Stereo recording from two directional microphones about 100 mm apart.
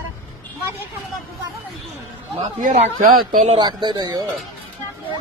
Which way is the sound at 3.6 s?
50° right (ahead or behind).